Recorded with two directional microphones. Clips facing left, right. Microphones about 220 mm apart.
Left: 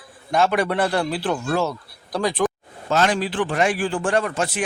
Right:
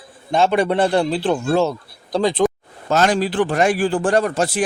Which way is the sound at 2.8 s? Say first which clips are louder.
Right 3 dB; 40° right (ahead or behind).